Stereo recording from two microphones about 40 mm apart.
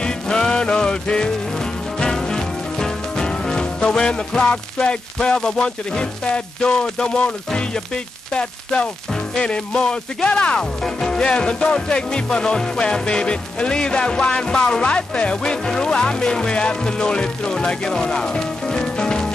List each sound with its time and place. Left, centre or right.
0.0 s music: left
9.3 s music: left
10.8 s music: centre